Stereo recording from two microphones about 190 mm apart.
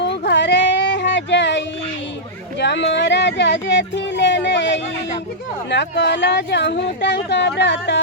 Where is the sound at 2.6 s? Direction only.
65° left (ahead or behind).